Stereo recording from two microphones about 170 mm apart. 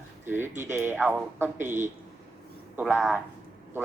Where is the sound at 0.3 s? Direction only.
15° right (ahead or behind).